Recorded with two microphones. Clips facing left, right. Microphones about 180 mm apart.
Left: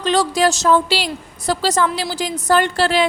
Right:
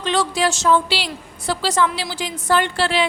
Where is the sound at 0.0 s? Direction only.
40° left (ahead or behind).